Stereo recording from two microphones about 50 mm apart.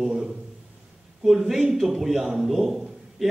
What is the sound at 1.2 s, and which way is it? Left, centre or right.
A man's voice, centre.